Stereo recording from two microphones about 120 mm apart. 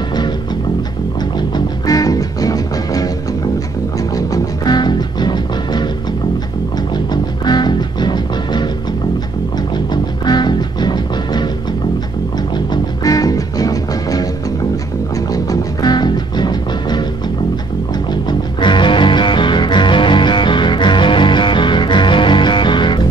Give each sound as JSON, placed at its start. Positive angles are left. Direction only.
{"t": 1.9, "sound": "music", "side_deg": 30}
{"t": 4.1, "sound": "music", "side_deg": 35}
{"t": 7.1, "sound": "music", "side_deg": 35}
{"t": 10.2, "sound": "music", "side_deg": 35}
{"t": 12.5, "sound": "music", "side_deg": 35}
{"t": 18.6, "sound": "music", "side_deg": 40}